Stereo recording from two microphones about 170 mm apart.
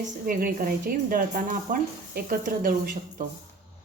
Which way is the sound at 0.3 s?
55° right (ahead or behind).